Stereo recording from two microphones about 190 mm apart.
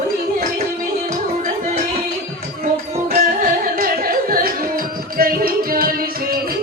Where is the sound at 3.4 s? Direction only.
50° right (ahead or behind).